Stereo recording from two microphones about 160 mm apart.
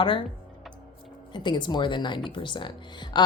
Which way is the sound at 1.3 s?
30° left (ahead or behind).